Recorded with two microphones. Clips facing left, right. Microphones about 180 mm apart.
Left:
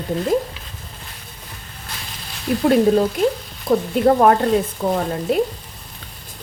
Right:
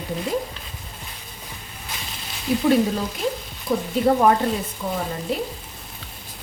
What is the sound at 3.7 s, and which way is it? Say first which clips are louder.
Speech: left 6 dB; 65° left (ahead or behind).